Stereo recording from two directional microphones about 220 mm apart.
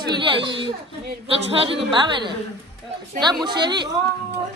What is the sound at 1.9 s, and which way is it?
Speech, 20° right (ahead or behind).